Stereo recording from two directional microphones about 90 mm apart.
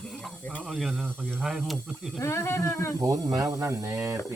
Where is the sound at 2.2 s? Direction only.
35° left (ahead or behind).